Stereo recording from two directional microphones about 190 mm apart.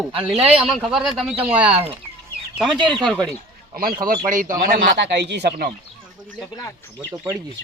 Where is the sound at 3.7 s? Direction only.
50° right (ahead or behind).